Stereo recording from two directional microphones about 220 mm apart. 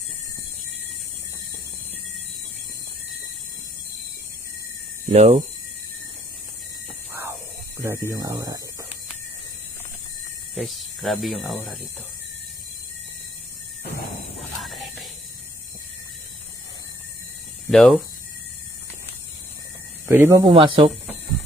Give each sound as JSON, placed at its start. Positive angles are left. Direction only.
{"t": 5.0, "sound": "speech", "side_deg": -30}
{"t": 7.8, "sound": "speech", "side_deg": -10}
{"t": 10.5, "sound": "speech", "side_deg": 0}
{"t": 14.3, "sound": "music", "side_deg": 0}
{"t": 17.7, "sound": "speech", "side_deg": 0}
{"t": 20.1, "sound": "speech", "side_deg": -10}
{"t": 20.5, "sound": "speech", "side_deg": -25}